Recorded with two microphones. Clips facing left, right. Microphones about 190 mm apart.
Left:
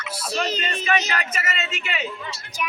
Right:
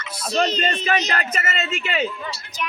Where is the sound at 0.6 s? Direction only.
30° right (ahead or behind).